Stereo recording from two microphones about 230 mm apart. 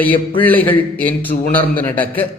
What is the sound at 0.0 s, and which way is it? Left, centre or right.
A man's voice, centre.